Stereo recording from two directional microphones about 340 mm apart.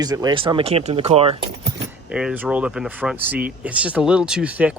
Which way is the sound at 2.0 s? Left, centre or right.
Centre.